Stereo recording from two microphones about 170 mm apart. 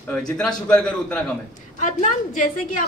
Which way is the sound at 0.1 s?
5° left (ahead or behind).